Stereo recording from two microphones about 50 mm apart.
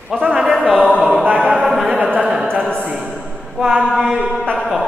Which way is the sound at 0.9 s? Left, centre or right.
Right.